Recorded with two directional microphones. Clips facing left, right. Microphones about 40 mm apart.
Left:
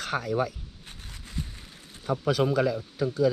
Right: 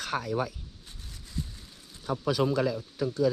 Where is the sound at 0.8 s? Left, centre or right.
Left.